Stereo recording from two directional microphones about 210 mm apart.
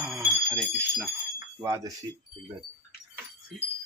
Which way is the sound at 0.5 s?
5° left (ahead or behind).